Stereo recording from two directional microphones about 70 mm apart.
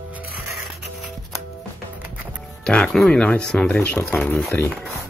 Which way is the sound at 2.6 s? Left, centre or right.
Centre.